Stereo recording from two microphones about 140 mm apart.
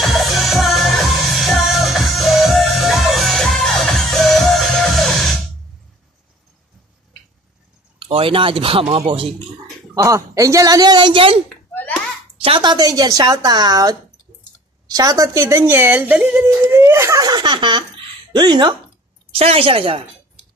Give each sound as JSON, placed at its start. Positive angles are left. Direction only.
{"t": 0.0, "sound": "music", "side_deg": 0}
{"t": 8.0, "sound": "speech", "side_deg": -40}
{"t": 10.0, "sound": "a woman's voice", "side_deg": -20}
{"t": 19.3, "sound": "a woman's voice", "side_deg": -45}